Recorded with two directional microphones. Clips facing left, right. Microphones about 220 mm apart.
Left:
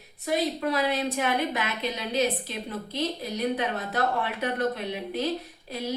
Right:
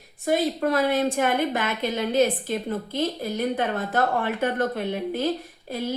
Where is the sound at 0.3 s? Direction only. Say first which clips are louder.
Right 4 dB; 50° right (ahead or behind).